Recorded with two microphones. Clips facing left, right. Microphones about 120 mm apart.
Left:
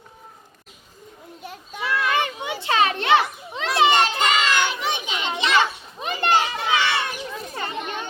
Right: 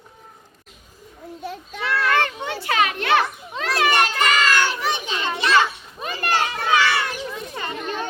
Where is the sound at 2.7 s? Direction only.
30° left (ahead or behind).